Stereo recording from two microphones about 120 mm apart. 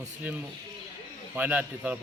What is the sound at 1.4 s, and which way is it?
Speech, 15° right (ahead or behind).